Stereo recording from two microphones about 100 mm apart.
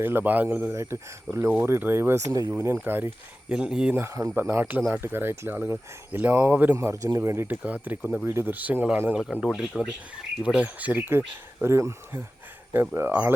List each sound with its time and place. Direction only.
0.0 s speech: 20° right (ahead or behind)
2.5 s speech: 25° right (ahead or behind)
3.5 s speech: 5° right (ahead or behind)
3.9 s speech: 30° right (ahead or behind)
6.7 s speech: 30° right (ahead or behind)